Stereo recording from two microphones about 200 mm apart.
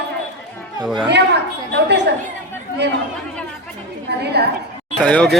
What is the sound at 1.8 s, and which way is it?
Chatter, 60° right (ahead or behind).